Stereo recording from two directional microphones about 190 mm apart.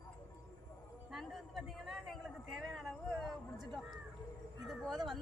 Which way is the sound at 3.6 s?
20° right (ahead or behind).